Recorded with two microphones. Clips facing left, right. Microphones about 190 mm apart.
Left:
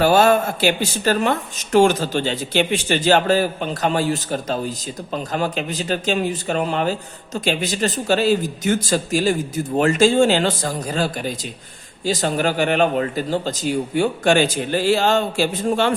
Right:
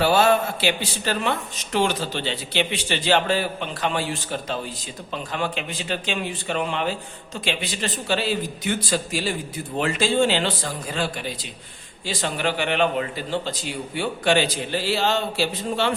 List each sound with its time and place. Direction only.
0.0 s speech: 45° left (ahead or behind)